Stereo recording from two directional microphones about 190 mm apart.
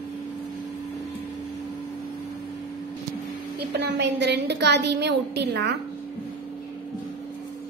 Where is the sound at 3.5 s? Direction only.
60° right (ahead or behind).